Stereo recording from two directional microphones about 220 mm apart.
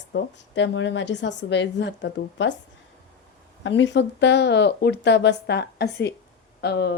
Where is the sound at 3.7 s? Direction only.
55° left (ahead or behind).